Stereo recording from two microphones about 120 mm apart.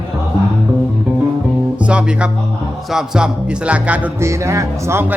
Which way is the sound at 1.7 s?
10° right (ahead or behind).